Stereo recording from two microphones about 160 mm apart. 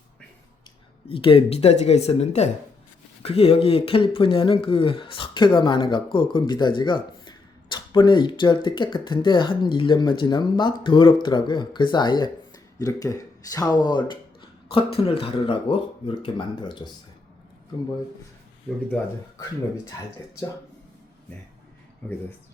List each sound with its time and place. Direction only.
1.0 s speech: 35° left (ahead or behind)